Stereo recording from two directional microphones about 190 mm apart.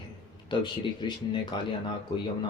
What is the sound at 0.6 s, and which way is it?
Speech, 25° left (ahead or behind).